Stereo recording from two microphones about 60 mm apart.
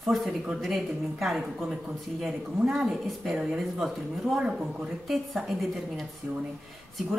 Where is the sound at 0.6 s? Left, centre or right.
Centre.